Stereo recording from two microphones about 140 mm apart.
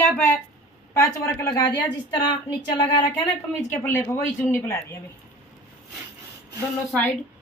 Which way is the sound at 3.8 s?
15° left (ahead or behind).